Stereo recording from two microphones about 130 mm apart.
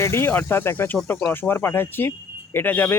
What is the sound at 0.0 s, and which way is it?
Speech, 20° left (ahead or behind).